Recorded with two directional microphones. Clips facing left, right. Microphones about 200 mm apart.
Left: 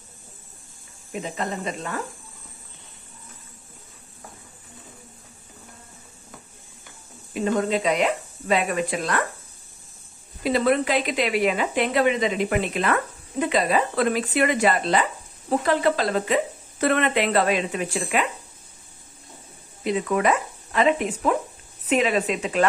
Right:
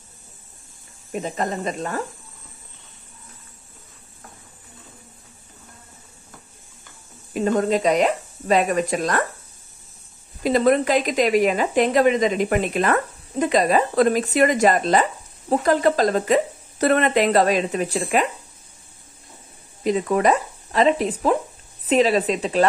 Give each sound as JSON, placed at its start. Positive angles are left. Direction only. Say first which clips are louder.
{"t": 1.1, "sound": "speech", "louder": "right 4 dB", "side_deg": -45}
{"t": 7.3, "sound": "speech", "louder": "right 3 dB", "side_deg": -40}
{"t": 10.4, "sound": "speech", "louder": "right 3 dB", "side_deg": -40}
{"t": 19.8, "sound": "speech", "louder": "right 3 dB", "side_deg": -40}